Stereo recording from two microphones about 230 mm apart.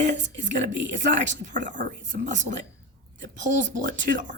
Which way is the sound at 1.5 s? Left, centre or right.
Right.